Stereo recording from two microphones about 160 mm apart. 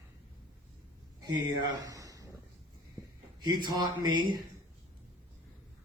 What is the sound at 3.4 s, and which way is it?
Speech, 25° right (ahead or behind).